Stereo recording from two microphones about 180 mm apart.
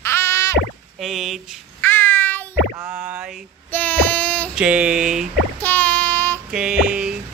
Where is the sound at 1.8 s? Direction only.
10° left (ahead or behind).